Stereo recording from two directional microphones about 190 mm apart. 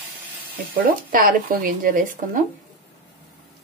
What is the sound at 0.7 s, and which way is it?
Speech, 50° right (ahead or behind).